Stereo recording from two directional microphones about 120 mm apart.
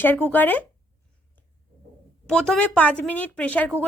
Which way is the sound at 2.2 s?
5° left (ahead or behind).